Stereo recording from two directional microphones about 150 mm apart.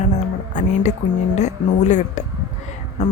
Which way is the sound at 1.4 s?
50° left (ahead or behind).